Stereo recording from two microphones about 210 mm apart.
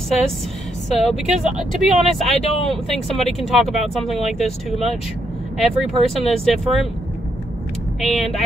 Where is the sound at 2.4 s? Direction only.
30° left (ahead or behind).